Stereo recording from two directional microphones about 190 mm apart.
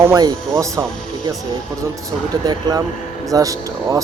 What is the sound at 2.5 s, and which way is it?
Speech, 20° right (ahead or behind).